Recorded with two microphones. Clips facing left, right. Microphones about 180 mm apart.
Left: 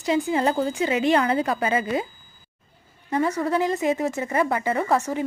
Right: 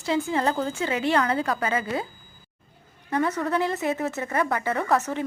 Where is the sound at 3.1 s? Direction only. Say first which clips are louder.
Left 2 dB; 10° left (ahead or behind).